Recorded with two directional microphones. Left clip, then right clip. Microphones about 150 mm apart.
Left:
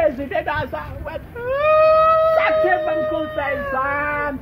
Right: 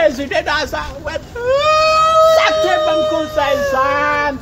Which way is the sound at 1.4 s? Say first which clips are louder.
Right 2 dB; 45° right (ahead or behind).